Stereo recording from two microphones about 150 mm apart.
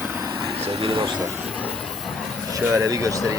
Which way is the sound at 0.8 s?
35° right (ahead or behind).